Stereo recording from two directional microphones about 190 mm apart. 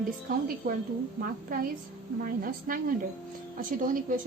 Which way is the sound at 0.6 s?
50° right (ahead or behind).